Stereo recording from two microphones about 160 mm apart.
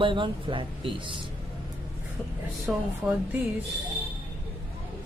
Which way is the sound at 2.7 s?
5° right (ahead or behind).